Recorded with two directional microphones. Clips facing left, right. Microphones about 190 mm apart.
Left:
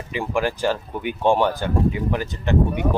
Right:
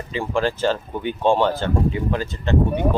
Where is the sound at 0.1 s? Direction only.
15° left (ahead or behind).